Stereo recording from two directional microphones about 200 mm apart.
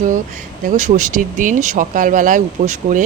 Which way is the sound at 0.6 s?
35° right (ahead or behind).